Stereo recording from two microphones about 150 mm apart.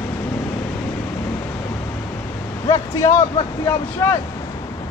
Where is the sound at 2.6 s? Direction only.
20° left (ahead or behind).